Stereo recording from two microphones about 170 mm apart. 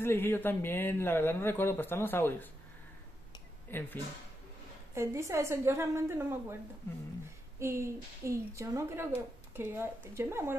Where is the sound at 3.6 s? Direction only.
10° left (ahead or behind).